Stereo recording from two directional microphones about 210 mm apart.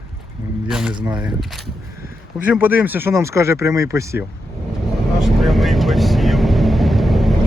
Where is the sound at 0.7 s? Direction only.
5° right (ahead or behind).